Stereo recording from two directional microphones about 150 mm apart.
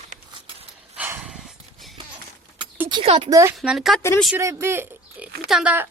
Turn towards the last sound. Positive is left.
turn(degrees=-10)  # may be behind; listen again after turning